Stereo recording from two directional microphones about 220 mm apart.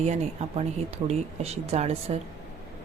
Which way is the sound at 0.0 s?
30° right (ahead or behind).